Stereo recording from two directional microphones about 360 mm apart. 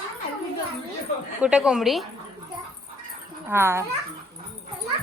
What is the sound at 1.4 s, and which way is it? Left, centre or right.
Speech, centre.